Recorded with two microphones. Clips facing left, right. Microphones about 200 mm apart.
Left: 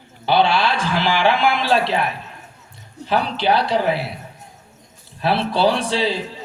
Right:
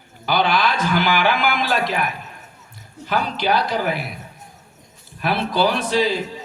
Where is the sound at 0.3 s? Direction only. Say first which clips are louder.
Left 2 dB; 30° left (ahead or behind).